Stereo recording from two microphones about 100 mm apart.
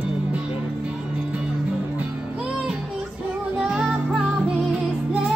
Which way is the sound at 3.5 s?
10° right (ahead or behind).